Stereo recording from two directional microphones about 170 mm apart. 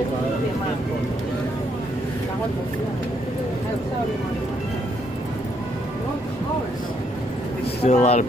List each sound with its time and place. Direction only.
7.8 s speech: 40° left (ahead or behind)